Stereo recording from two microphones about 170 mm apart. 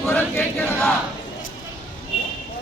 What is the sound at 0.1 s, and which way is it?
Chant, 10° left (ahead or behind).